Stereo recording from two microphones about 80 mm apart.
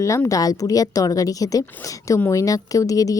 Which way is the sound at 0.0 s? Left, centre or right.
Left.